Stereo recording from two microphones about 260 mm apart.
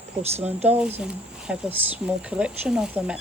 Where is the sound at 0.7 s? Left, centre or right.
Centre.